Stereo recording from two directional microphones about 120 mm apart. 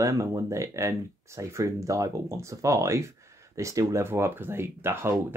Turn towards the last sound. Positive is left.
turn(degrees=-20)  # may be behind; listen again after turning